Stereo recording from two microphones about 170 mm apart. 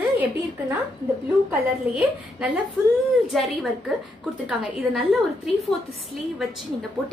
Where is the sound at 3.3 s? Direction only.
Centre (ahead or behind).